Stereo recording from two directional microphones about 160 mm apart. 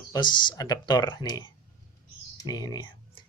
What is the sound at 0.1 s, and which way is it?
Speech, 30° left (ahead or behind).